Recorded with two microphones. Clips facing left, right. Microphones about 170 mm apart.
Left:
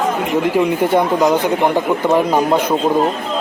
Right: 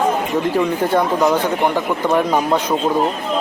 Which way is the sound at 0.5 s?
15° left (ahead or behind).